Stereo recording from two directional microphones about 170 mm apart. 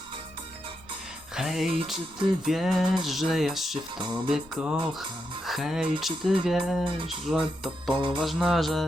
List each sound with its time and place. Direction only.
1.4 s music: centre (ahead or behind)
2.4 s speech: centre (ahead or behind)
6.8 s speech: 30° right (ahead or behind)
7.3 s speech: 5° right (ahead or behind)
7.9 s music: 30° right (ahead or behind)
8.2 s speech: centre (ahead or behind)